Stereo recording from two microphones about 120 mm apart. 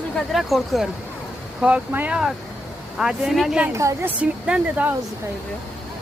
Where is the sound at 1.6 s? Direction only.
10° right (ahead or behind).